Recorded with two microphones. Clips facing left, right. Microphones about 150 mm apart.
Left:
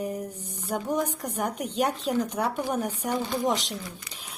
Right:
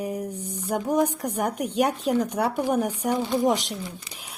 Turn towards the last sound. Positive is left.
turn(degrees=-10)  # may be behind; listen again after turning